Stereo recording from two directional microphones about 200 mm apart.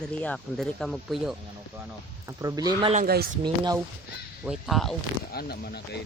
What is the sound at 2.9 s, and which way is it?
Speech, 50° right (ahead or behind).